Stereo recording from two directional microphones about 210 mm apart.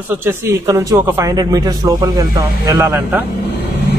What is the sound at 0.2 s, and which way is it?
A man's voice, 15° right (ahead or behind).